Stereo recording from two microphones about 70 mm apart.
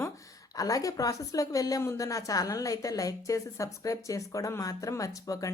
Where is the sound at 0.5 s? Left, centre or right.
Left.